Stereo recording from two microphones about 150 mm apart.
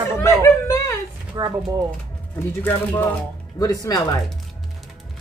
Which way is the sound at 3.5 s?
25° left (ahead or behind).